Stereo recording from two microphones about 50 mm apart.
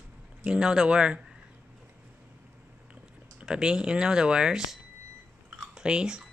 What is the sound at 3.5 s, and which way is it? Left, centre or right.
Speech, centre.